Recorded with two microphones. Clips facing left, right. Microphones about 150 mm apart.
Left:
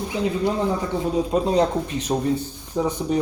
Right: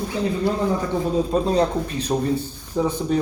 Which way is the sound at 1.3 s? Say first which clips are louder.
Left 1 dB; 20° left (ahead or behind).